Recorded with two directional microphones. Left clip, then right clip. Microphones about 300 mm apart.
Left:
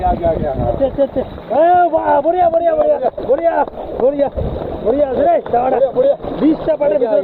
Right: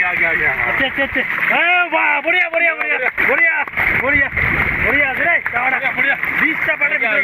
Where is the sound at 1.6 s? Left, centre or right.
Right.